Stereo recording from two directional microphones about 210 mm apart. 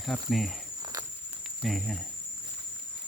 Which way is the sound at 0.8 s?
20° right (ahead or behind).